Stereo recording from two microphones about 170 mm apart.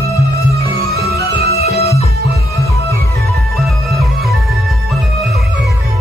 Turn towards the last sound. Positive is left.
turn(degrees=0)  # may be behind; listen again after turning